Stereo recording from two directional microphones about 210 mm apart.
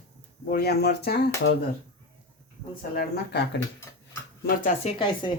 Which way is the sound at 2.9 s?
50° left (ahead or behind).